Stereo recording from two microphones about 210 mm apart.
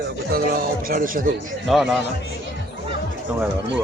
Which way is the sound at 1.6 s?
Centre (ahead or behind).